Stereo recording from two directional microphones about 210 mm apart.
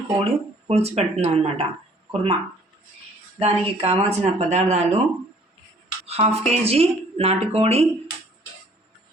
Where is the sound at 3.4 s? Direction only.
30° right (ahead or behind).